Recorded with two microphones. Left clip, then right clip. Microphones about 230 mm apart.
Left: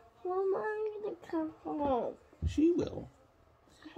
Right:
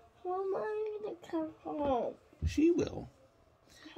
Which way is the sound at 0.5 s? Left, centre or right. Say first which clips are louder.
Left 2 dB; left.